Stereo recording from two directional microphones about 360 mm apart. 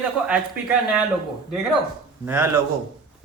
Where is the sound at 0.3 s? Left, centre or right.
Centre.